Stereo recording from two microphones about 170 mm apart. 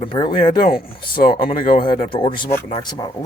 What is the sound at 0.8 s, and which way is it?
Speech, 60° left (ahead or behind).